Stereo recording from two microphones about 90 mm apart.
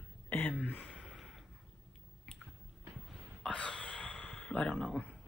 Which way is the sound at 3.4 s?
15° left (ahead or behind).